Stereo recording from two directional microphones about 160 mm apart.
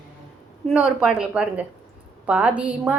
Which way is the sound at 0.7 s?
Centre (ahead or behind).